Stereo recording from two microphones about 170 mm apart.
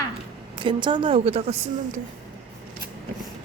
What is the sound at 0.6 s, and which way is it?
A woman's voice, 30° right (ahead or behind).